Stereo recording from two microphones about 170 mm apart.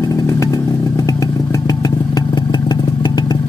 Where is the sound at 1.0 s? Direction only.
20° left (ahead or behind).